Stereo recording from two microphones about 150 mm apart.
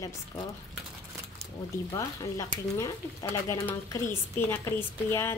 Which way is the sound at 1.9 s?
25° left (ahead or behind).